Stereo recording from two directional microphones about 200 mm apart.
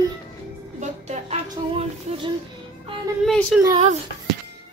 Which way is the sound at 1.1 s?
35° right (ahead or behind).